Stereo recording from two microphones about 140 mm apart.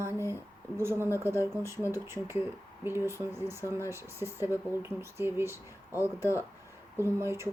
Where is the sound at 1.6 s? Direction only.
20° right (ahead or behind).